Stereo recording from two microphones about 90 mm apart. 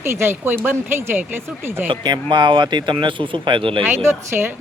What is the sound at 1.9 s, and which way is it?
Speech, 60° right (ahead or behind).